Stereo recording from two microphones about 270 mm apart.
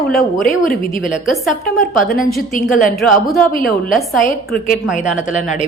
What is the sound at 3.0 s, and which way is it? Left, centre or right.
Speech, centre.